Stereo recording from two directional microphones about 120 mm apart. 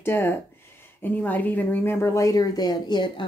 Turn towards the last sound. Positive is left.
turn(degrees=40)  # may be behind; listen again after turning